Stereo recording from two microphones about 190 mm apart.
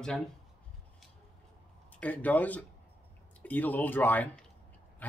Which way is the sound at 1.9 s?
10° left (ahead or behind).